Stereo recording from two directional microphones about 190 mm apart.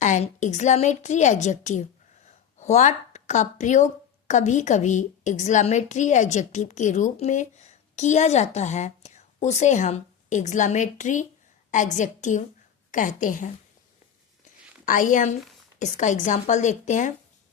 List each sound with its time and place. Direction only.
0.0 s a woman's voice: 40° left (ahead or behind)
2.2 s a sound: 40° left (ahead or behind)
4.3 s a woman's voice: 40° left (ahead or behind)
14.8 s a woman's voice: 45° left (ahead or behind)